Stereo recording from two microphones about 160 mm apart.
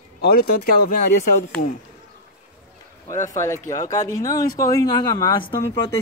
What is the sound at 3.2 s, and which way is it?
Speech, 20° left (ahead or behind).